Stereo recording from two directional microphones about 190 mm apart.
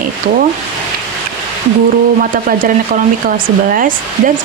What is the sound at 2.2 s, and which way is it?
Speech, 50° right (ahead or behind).